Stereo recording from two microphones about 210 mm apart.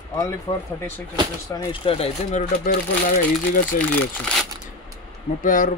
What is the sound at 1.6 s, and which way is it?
Speech, 25° left (ahead or behind).